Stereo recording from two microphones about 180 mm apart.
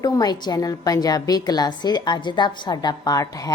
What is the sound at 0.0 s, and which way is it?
A woman's voice, 20° left (ahead or behind).